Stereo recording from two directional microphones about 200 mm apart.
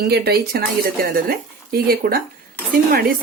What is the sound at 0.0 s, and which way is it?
Speech, 50° right (ahead or behind).